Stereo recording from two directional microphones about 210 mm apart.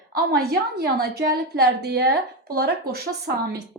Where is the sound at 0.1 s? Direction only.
50° right (ahead or behind).